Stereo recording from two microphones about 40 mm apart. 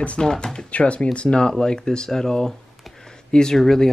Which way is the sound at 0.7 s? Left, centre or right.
Left.